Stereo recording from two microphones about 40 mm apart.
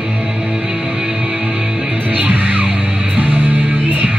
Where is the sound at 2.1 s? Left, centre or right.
Right.